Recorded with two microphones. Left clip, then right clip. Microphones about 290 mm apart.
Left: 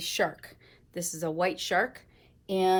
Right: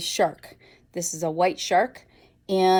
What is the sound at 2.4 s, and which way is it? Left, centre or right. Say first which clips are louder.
Speech: right 6 dB; right.